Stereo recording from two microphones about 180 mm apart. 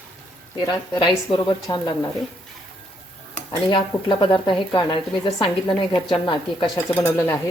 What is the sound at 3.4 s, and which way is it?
Speech, 30° left (ahead or behind).